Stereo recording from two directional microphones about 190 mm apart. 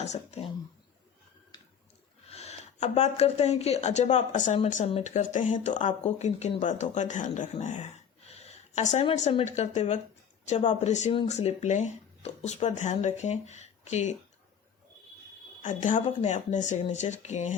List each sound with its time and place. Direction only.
0.0 s speech: 35° left (ahead or behind)
2.3 s speech: 35° left (ahead or behind)
8.3 s a sound: 35° left (ahead or behind)
9.6 s speech: 35° left (ahead or behind)
15.6 s speech: 40° left (ahead or behind)